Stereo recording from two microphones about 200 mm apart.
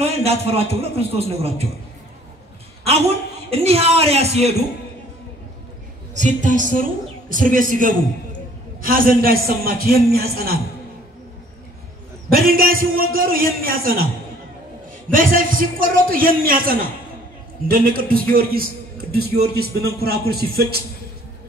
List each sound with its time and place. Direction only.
0.0 s a man's voice: 30° right (ahead or behind)
3.4 s a man's voice: 30° right (ahead or behind)
6.1 s a woman's voice: 40° right (ahead or behind)
12.3 s a man's voice: 45° right (ahead or behind)
15.0 s a man's voice: 45° right (ahead or behind)